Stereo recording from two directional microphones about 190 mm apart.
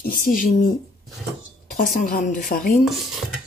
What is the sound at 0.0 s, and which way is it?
Speech, 45° left (ahead or behind).